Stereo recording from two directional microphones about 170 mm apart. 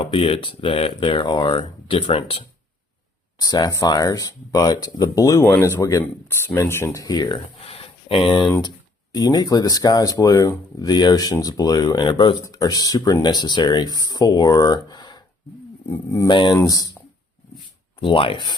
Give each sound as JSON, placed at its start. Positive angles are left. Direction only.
{"t": 0.0, "sound": "speech", "side_deg": 35}
{"t": 3.4, "sound": "speech", "side_deg": 20}
{"t": 16.3, "sound": "speech", "side_deg": 30}
{"t": 18.0, "sound": "speech", "side_deg": 30}